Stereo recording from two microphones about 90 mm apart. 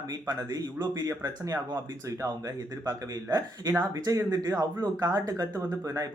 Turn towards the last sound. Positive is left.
turn(degrees=-40)  # may be behind; listen again after turning